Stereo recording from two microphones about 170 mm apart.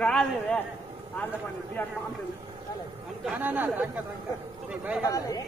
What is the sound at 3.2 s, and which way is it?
A man's voice, 10° right (ahead or behind).